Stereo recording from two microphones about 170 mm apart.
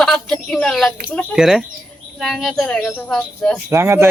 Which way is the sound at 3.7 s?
15° right (ahead or behind).